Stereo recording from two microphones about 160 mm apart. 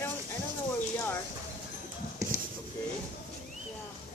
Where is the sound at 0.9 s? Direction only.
15° left (ahead or behind).